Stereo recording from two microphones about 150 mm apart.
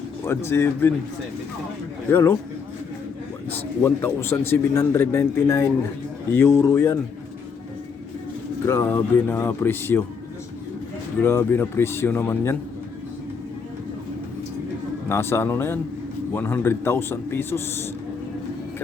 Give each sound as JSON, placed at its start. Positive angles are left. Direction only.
{"t": 0.3, "sound": "speech", "side_deg": 15}
{"t": 2.0, "sound": "speech", "side_deg": 15}
{"t": 3.5, "sound": "speech", "side_deg": 15}
{"t": 8.6, "sound": "speech", "side_deg": 15}
{"t": 11.2, "sound": "speech", "side_deg": 15}
{"t": 15.1, "sound": "speech", "side_deg": 15}